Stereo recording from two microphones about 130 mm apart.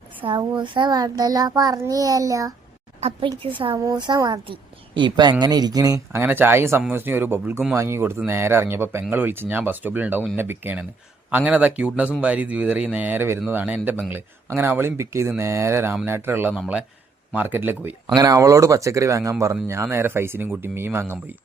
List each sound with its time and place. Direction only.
0.3 s a child's voice: 35° right (ahead or behind)
3.2 s speech: 40° right (ahead or behind)
6.2 s a child's voice: 15° right (ahead or behind)
18.1 s a child's voice: 30° right (ahead or behind)